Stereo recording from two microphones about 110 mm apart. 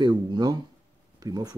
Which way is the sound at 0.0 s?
40° right (ahead or behind).